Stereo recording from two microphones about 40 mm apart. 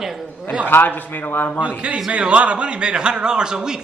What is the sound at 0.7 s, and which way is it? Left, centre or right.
Speech, left.